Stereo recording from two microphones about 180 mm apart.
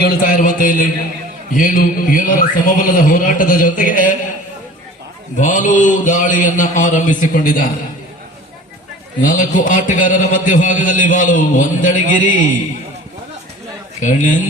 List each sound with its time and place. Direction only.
0.0 s a man's voice: 50° left (ahead or behind)
5.4 s a man's voice: 45° left (ahead or behind)
9.2 s a man's voice: 45° left (ahead or behind)
14.0 s a man's voice: 45° left (ahead or behind)